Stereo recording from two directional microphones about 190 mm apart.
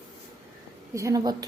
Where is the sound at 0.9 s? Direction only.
20° right (ahead or behind).